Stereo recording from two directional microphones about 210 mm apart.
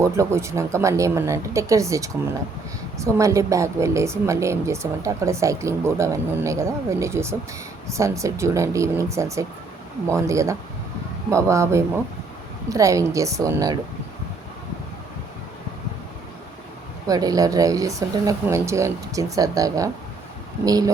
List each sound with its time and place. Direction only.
0.0 s a woman's voice: 15° right (ahead or behind)
17.1 s a woman's voice: 15° right (ahead or behind)